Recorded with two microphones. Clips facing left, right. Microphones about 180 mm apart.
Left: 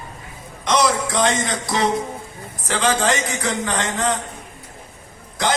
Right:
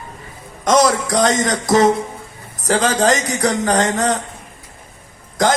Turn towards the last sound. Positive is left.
turn(degrees=-45)  # may be behind; listen again after turning